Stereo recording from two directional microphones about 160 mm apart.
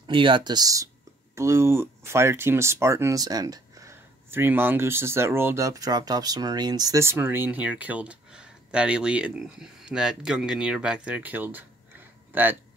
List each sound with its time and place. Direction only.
0.0 s speech: 30° right (ahead or behind); by 12.5 s 10° right (ahead or behind)